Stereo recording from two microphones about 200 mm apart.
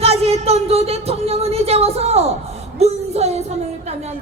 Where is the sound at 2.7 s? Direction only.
30° right (ahead or behind).